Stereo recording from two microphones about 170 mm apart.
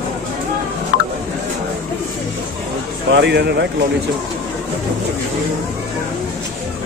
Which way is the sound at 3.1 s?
90° right.